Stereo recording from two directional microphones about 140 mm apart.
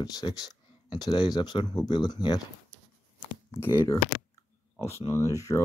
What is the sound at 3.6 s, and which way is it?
Speech, 15° left (ahead or behind).